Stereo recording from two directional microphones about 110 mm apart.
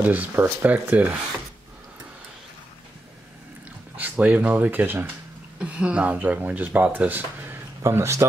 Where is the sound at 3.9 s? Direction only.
15° right (ahead or behind).